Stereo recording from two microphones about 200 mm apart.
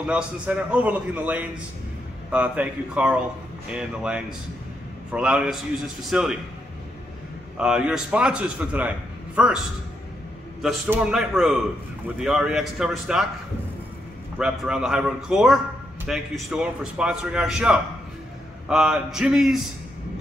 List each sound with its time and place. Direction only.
0.0 s a man's voice: 5° right (ahead or behind)
7.5 s a man's voice: 5° right (ahead or behind)
10.6 s a man's voice: 5° right (ahead or behind)
14.4 s a man's voice: 5° right (ahead or behind)